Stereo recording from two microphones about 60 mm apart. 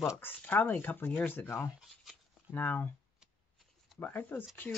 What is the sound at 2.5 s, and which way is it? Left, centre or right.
Speech, left.